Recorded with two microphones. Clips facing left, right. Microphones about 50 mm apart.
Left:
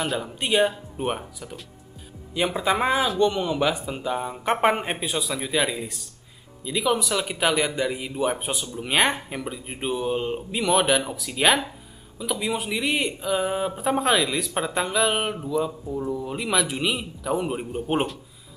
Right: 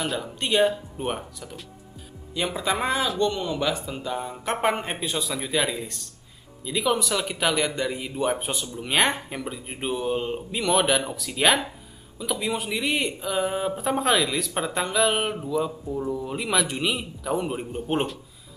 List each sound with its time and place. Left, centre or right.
0.0 s speech: centre